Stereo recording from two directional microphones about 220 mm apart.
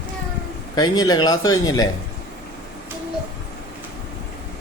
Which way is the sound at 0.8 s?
20° left (ahead or behind).